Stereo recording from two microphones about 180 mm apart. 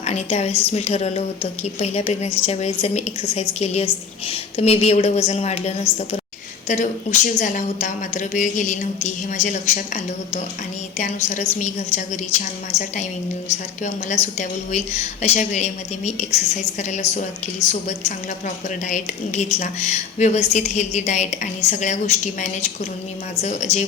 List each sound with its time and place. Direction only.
0.0 s a woman's voice: 35° left (ahead or behind)
13.5 s a woman's voice: 40° left (ahead or behind)